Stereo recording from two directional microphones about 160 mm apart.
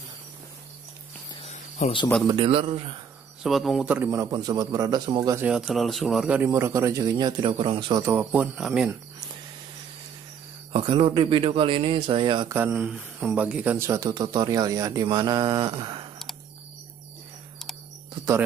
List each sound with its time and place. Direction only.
1.8 s speech: 50° left (ahead or behind)
2.2 s speech: 30° right (ahead or behind)
3.4 s speech: centre (ahead or behind); by 5.4 s 25° right (ahead or behind)
5.4 s speech: 5° right (ahead or behind)
6.5 s speech: 15° right (ahead or behind); by 8.0 s 30° right (ahead or behind)
8.0 s speech: 15° right (ahead or behind)
10.7 s speech: 35° right (ahead or behind)
12.4 s speech: 15° right (ahead or behind)